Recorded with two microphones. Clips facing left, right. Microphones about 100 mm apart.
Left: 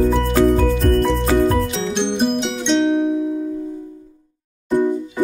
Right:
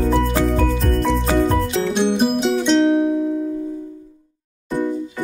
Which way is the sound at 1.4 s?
Centre (ahead or behind).